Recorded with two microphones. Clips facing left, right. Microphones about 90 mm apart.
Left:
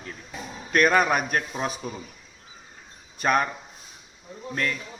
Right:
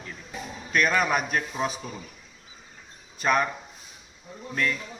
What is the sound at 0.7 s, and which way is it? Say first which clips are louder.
Speech: left 3 dB; 45° left (ahead or behind).